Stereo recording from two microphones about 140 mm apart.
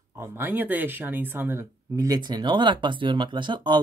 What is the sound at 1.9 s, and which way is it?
Speech, 25° right (ahead or behind).